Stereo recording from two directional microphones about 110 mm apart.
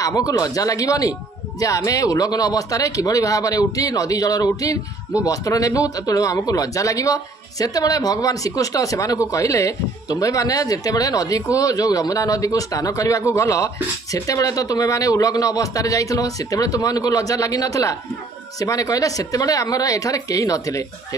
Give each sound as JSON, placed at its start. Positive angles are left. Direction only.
{"t": 0.0, "sound": "speech", "side_deg": 35}